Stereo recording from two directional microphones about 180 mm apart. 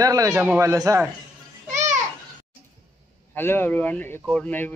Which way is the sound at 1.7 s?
45° right (ahead or behind).